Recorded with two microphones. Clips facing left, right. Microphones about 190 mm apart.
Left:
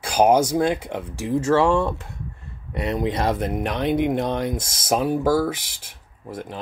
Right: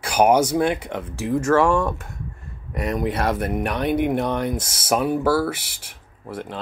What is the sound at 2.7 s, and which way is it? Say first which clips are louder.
Speech: even; 30° left (ahead or behind).